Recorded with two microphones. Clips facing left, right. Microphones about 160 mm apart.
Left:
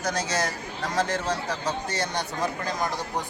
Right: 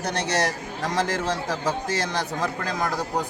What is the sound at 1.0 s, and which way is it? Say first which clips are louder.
Speech: right 2 dB; 90° right.